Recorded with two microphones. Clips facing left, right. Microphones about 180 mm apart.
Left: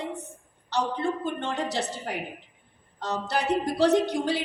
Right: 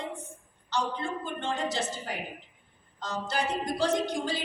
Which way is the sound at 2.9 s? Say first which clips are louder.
Left 3 dB; 65° left (ahead or behind).